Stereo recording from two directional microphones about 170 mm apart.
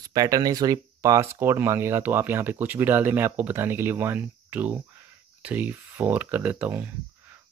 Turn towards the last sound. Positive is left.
turn(degrees=-10)  # may be behind; listen again after turning